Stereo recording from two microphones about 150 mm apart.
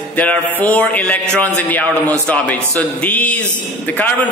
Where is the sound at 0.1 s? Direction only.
10° left (ahead or behind).